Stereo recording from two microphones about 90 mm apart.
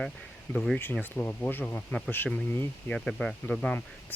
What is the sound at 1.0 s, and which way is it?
Speech, 20° left (ahead or behind).